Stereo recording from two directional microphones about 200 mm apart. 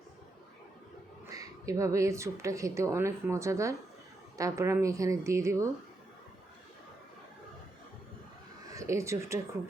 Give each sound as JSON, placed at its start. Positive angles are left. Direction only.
{"t": 1.3, "sound": "speech", "side_deg": -15}
{"t": 8.7, "sound": "speech", "side_deg": -15}